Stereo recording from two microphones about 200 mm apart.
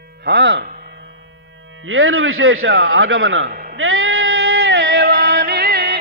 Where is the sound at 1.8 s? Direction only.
80° right.